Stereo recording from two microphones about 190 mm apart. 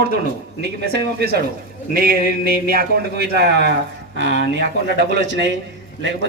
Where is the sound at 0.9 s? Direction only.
55° right (ahead or behind).